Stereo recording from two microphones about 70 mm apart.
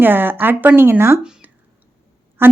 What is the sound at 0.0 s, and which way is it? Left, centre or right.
Speech, right.